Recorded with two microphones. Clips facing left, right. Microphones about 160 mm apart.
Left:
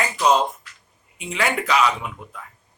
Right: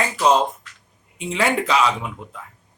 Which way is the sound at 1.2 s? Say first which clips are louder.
Right 3 dB; 30° right (ahead or behind).